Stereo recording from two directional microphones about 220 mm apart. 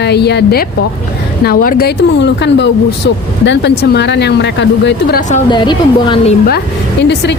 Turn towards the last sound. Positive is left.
turn(degrees=50)  # may be behind; listen again after turning